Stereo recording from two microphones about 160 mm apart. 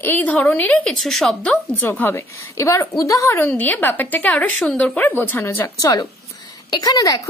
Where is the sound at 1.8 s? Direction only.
10° left (ahead or behind).